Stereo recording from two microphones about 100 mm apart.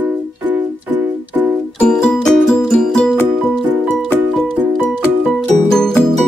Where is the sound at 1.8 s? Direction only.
5° left (ahead or behind).